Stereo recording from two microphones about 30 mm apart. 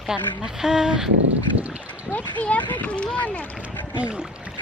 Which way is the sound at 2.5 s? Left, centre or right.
Left.